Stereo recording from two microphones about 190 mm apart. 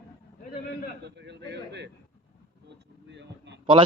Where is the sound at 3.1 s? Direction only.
65° right (ahead or behind).